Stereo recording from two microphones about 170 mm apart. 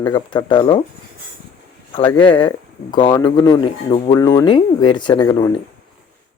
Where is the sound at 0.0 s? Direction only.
25° left (ahead or behind).